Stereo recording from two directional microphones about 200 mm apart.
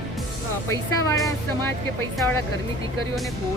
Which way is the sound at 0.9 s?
15° left (ahead or behind).